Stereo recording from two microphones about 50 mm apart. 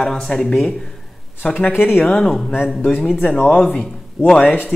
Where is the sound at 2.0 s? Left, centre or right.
Centre.